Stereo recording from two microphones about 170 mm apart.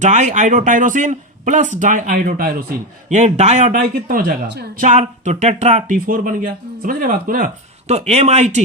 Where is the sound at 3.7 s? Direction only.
60° right (ahead or behind).